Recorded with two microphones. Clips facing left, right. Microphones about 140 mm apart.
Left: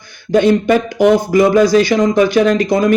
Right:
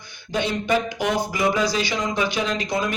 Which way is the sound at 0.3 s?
50° left (ahead or behind).